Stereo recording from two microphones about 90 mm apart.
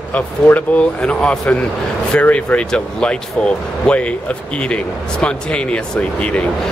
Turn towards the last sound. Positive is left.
turn(degrees=15)  # may be behind; listen again after turning